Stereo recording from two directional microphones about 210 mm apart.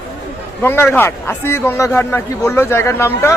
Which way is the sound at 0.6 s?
10° left (ahead or behind).